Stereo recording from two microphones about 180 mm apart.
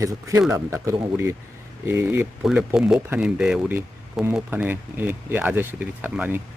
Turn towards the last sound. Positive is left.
turn(degrees=-10)  # may be behind; listen again after turning